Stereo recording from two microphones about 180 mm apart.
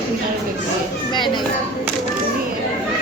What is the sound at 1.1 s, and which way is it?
Speech, 25° left (ahead or behind).